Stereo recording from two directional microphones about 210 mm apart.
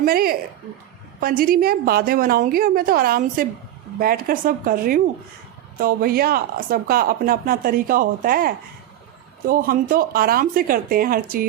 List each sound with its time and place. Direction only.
0.0 s a woman's voice: 45° right (ahead or behind)